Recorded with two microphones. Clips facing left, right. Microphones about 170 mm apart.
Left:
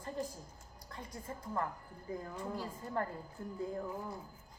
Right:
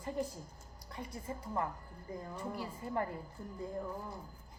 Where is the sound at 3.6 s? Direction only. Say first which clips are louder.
Left 1 dB; 5° left (ahead or behind).